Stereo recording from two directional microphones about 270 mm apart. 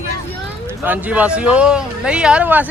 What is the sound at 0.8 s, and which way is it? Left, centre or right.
Speech, centre.